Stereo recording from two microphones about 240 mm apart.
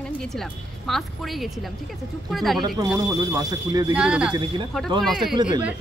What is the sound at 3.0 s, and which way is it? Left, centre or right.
Speech, centre.